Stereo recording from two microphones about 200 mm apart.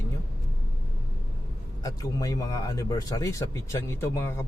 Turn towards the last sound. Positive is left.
turn(degrees=15)  # may be behind; listen again after turning